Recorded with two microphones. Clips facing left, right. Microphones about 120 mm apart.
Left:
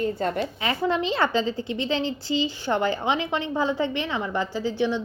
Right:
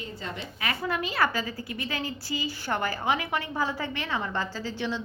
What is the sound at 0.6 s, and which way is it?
A woman's voice, 25° left (ahead or behind).